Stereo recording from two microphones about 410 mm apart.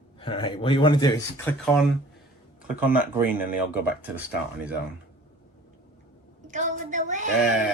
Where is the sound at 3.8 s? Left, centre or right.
Centre.